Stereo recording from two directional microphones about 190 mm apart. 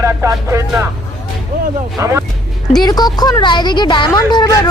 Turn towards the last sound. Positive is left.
turn(degrees=20)  # may be behind; listen again after turning